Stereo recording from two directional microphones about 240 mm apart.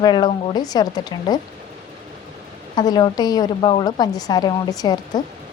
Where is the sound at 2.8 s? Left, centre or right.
Centre.